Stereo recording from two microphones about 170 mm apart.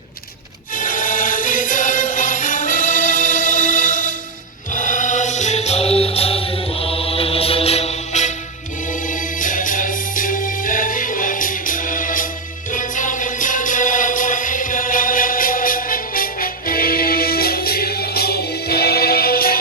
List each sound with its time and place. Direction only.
0.8 s music: 50° left (ahead or behind)